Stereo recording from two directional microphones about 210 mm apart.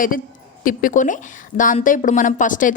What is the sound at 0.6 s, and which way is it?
Speech, 40° left (ahead or behind).